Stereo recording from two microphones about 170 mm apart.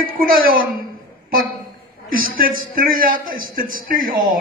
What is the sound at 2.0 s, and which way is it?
A man's voice, 55° right (ahead or behind).